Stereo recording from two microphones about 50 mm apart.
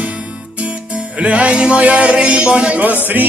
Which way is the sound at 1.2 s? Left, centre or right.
Right.